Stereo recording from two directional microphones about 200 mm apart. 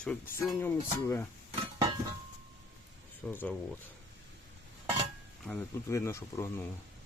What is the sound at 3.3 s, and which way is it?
Speech, 10° left (ahead or behind).